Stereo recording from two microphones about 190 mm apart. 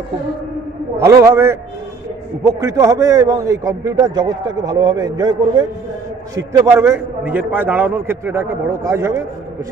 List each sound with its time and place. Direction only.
0.9 s a man's voice: 15° right (ahead or behind)